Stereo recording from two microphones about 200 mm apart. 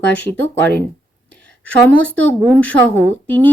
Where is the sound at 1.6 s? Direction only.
5° left (ahead or behind).